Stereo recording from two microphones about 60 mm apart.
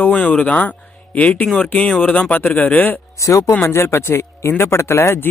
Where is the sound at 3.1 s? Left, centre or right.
Left.